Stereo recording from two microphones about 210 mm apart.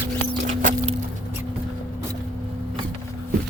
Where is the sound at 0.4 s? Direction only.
35° right (ahead or behind).